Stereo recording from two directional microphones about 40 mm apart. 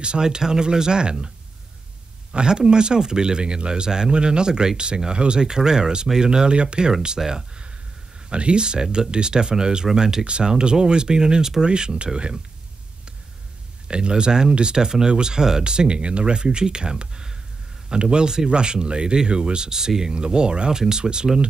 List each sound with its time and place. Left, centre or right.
0.0 s speech: right
2.3 s speech: centre
13.8 s speech: right